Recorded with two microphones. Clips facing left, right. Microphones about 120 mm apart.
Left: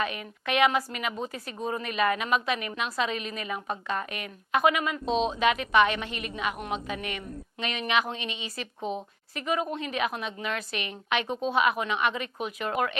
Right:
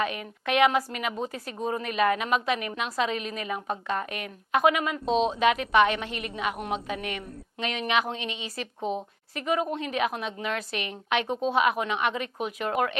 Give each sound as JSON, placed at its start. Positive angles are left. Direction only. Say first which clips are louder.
{"t": 0.0, "sound": "a woman's voice", "louder": "right 2 dB", "side_deg": -50}
{"t": 6.7, "sound": "a woman's voice", "louder": "right 1 dB", "side_deg": -35}
{"t": 7.6, "sound": "speech", "louder": "right 1 dB", "side_deg": -55}
{"t": 8.8, "sound": "a woman's voice", "louder": "right 2 dB", "side_deg": -20}
{"t": 9.3, "sound": "a woman's voice", "louder": "right 2 dB", "side_deg": -50}